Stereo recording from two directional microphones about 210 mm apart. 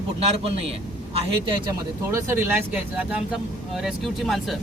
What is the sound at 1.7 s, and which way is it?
Speech, 15° right (ahead or behind).